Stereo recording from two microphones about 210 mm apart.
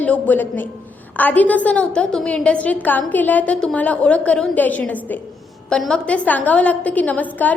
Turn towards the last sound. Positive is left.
turn(degrees=10)  # may be behind; listen again after turning